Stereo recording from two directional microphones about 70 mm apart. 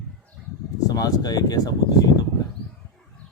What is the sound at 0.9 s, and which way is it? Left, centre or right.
Speech, left.